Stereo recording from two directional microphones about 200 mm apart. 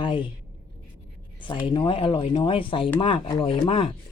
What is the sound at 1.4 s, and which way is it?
Speech, 25° left (ahead or behind).